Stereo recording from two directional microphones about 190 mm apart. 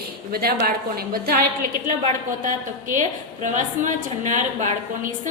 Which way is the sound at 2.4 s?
45° right (ahead or behind).